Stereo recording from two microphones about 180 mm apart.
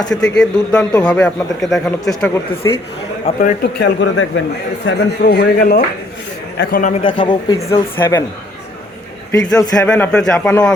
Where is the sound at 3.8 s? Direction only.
85° left.